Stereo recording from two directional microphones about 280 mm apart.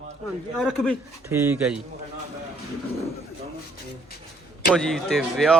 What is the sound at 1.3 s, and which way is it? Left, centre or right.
Speech, centre.